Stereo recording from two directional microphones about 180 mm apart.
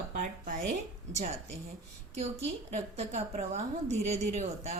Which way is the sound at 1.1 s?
40° right (ahead or behind).